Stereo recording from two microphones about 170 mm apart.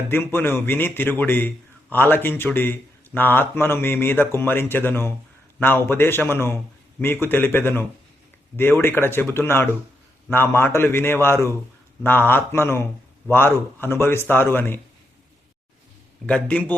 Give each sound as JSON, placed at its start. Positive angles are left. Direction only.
{"t": 0.1, "sound": "a man's voice", "side_deg": 15}
{"t": 16.2, "sound": "a man's voice", "side_deg": 5}